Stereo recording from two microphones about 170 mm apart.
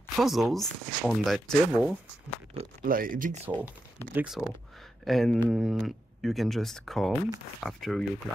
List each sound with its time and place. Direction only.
0.1 s speech: centre (ahead or behind)
2.8 s speech: 55° right (ahead or behind)
3.4 s speech: 10° right (ahead or behind)